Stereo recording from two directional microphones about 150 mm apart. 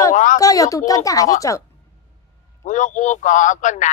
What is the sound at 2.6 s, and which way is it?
Speech, 55° left (ahead or behind).